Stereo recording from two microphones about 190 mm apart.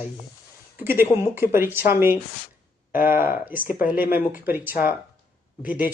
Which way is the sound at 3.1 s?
50° left (ahead or behind).